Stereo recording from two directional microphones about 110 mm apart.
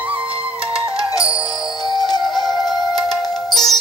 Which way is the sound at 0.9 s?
30° left (ahead or behind).